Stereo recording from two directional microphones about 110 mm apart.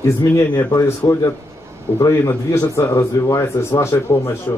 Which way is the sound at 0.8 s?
25° left (ahead or behind).